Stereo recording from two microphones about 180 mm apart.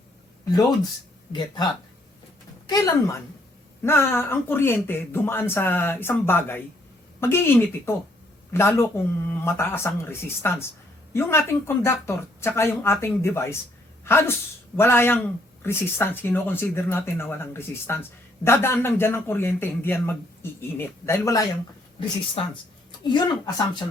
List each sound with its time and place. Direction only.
2.6 s a woman's voice: 20° left (ahead or behind)
22.4 s speech: 30° left (ahead or behind)